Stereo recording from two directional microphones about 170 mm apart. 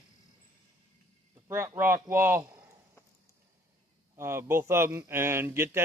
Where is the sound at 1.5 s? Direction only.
15° right (ahead or behind).